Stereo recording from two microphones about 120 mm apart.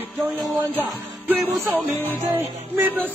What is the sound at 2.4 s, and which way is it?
Music, 15° right (ahead or behind).